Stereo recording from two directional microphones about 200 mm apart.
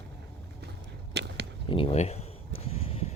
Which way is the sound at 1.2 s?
55° right (ahead or behind).